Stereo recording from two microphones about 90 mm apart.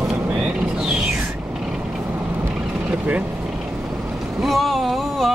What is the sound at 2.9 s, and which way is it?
Vehicle, 15° right (ahead or behind).